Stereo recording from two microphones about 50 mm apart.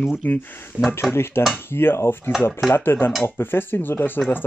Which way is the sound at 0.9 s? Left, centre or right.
Left.